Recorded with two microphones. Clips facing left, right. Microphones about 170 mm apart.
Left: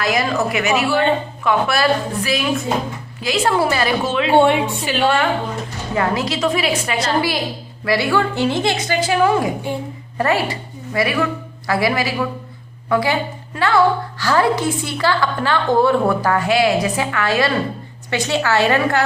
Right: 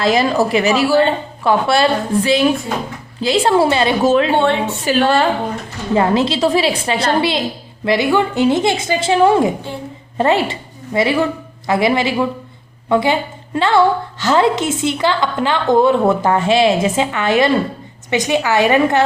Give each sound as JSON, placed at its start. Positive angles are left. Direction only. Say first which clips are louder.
{"t": 0.0, "sound": "a woman's voice", "louder": "right 4 dB", "side_deg": -30}
{"t": 4.0, "sound": "speech", "louder": "right 7 dB", "side_deg": -40}
{"t": 4.4, "sound": "a woman's voice", "louder": "left 2 dB", "side_deg": 15}
{"t": 4.9, "sound": "a woman's voice", "louder": "right 4 dB", "side_deg": -35}